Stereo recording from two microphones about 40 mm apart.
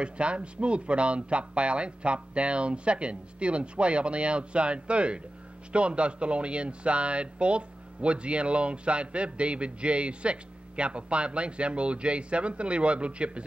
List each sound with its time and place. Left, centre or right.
0.0 s speech: right